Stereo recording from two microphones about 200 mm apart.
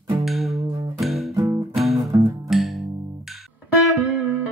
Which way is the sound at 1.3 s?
15° right (ahead or behind).